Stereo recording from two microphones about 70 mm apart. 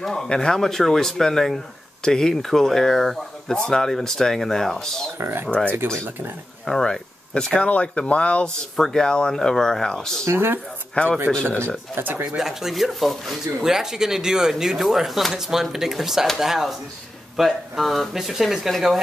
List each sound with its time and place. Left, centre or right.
0.0 s speech: centre
5.2 s speech: right
6.6 s speech: centre
8.7 s speech: centre
10.2 s speech: right
11.0 s speech: centre
11.9 s speech: right
12.3 s speech: centre